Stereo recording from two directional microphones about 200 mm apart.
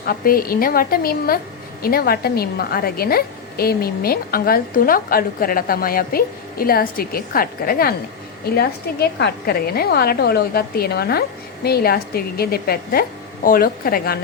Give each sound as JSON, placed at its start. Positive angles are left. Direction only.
{"t": 0.0, "sound": "a woman's voice", "side_deg": 45}